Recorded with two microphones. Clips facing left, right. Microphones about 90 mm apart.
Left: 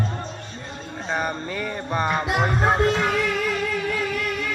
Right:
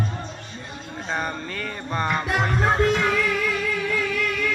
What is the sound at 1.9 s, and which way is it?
Music, 10° left (ahead or behind).